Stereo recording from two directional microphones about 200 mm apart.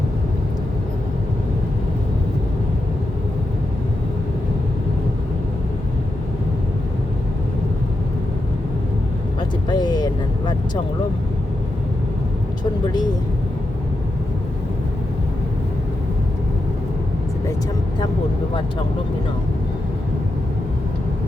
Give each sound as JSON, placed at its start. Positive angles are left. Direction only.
{"t": 9.6, "sound": "vehicle", "side_deg": 20}